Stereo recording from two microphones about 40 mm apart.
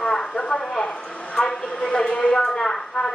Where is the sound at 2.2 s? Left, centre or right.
Centre.